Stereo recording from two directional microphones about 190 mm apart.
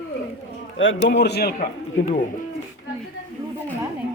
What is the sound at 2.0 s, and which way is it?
Speech, 85° left.